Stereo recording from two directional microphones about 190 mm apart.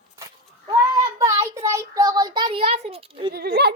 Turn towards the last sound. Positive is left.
turn(degrees=-55)  # may be behind; listen again after turning